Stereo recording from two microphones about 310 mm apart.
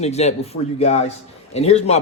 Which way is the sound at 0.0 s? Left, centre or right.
Left.